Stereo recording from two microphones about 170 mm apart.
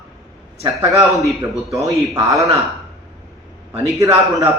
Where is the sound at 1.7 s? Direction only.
20° right (ahead or behind).